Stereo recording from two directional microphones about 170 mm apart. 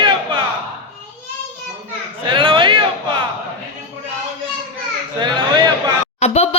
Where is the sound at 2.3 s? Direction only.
30° right (ahead or behind).